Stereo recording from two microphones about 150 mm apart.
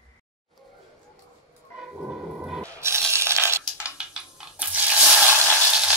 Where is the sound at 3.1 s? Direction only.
15° right (ahead or behind).